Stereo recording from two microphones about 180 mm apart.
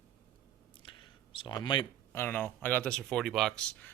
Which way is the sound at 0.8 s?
25° left (ahead or behind).